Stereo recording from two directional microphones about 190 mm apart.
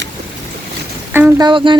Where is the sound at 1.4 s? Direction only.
25° right (ahead or behind).